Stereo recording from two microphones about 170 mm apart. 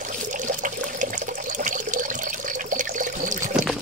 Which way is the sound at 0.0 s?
50° right (ahead or behind).